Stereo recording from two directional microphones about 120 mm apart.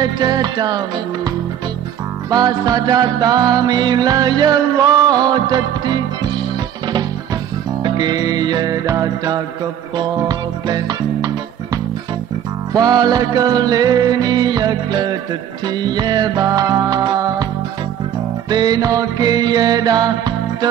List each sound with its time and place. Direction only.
0.0 s music: 35° right (ahead or behind)
2.3 s music: 35° right (ahead or behind)
7.8 s music: 35° right (ahead or behind)
18.5 s music: 35° right (ahead or behind)